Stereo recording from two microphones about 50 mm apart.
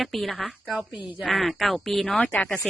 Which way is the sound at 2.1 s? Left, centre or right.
Left.